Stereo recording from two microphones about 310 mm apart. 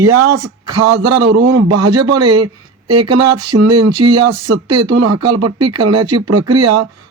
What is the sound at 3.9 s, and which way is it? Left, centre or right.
Speech, centre.